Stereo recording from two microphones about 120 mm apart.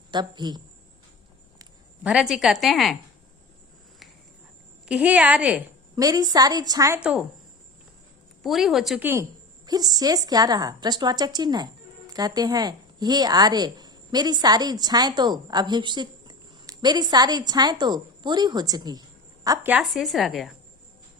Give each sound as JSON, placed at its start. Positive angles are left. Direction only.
{"t": 0.1, "sound": "a woman's voice", "side_deg": -35}
{"t": 2.0, "sound": "a woman's voice", "side_deg": -5}
{"t": 4.9, "sound": "a woman's voice", "side_deg": -10}
{"t": 6.0, "sound": "a woman's voice", "side_deg": -30}
{"t": 7.0, "sound": "a woman's voice", "side_deg": -10}
{"t": 8.4, "sound": "a woman's voice", "side_deg": 0}
{"t": 9.0, "sound": "a woman's voice", "side_deg": -20}
{"t": 9.6, "sound": "a woman's voice", "side_deg": -35}
{"t": 19.8, "sound": "a woman's voice", "side_deg": 0}